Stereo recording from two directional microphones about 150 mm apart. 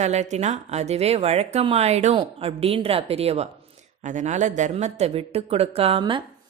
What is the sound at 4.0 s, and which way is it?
A man's voice, 55° right (ahead or behind).